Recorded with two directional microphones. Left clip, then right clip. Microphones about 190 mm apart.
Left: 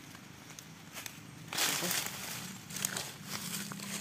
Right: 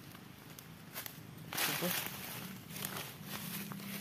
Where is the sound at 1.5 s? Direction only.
40° left (ahead or behind).